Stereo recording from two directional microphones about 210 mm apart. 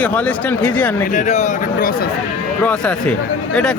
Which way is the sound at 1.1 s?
35° left (ahead or behind).